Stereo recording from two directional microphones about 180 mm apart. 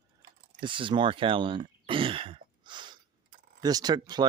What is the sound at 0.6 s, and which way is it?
Speech, 25° right (ahead or behind).